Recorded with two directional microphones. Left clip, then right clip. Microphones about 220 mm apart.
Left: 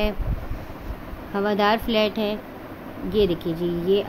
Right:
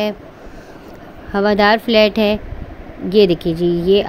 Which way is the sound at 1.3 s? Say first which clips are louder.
Right 8 dB; 15° right (ahead or behind).